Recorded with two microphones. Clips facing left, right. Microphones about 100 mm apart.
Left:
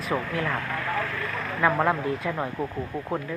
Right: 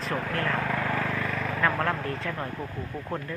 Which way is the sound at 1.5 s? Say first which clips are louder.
Left 5 dB; 15° left (ahead or behind).